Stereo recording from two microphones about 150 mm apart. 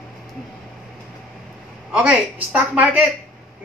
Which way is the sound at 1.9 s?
10° right (ahead or behind).